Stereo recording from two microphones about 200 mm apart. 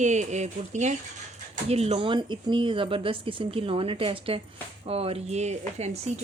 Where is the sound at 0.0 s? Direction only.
35° right (ahead or behind).